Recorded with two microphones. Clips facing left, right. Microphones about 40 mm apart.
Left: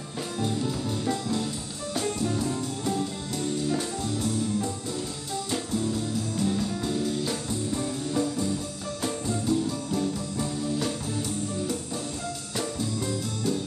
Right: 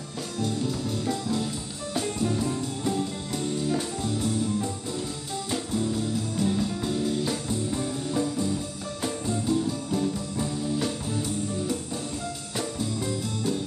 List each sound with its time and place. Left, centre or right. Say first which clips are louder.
0.7 s music: even; centre
2.0 s music: right 1 dB; centre
12.5 s music: even; centre